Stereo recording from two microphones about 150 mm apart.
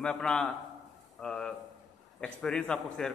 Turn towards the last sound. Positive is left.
turn(degrees=5)  # may be behind; listen again after turning